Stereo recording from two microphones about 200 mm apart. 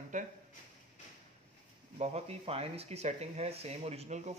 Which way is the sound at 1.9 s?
30° right (ahead or behind).